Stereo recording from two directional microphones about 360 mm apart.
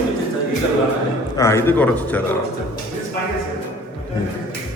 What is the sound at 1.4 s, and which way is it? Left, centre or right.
Speech, centre.